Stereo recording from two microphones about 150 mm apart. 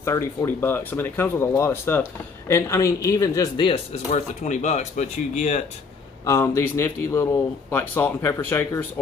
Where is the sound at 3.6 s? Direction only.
40° left (ahead or behind).